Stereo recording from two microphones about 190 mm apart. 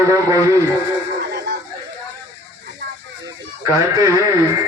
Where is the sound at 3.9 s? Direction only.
15° right (ahead or behind).